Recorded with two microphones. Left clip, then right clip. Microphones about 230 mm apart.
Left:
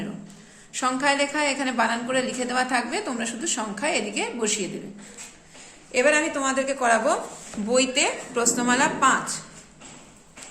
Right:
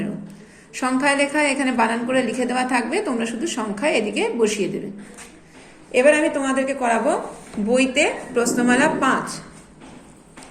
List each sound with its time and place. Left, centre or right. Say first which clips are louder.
0.7 s a woman's voice: right 3 dB; centre
5.9 s a woman's voice: right 5 dB; centre